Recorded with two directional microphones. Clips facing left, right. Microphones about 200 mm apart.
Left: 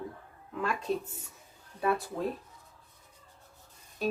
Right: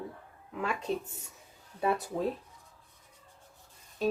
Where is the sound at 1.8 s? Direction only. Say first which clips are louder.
Even; 20° right (ahead or behind).